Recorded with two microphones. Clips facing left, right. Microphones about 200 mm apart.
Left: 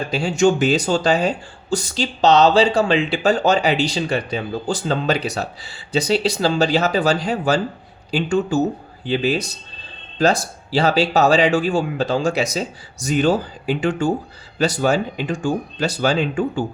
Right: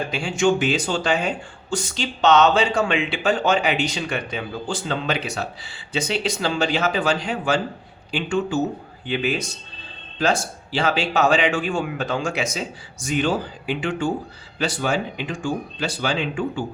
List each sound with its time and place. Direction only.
0.1 s speech: 40° left (ahead or behind)